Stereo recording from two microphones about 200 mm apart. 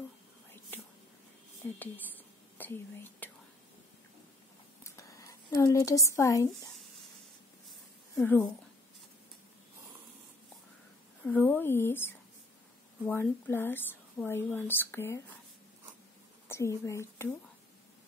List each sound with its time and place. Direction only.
2.5 s speech: 10° left (ahead or behind)
4.8 s speech: 15° left (ahead or behind)
8.2 s speech: 10° left (ahead or behind)
11.2 s speech: 10° left (ahead or behind)
16.4 s a woman's voice: 15° left (ahead or behind)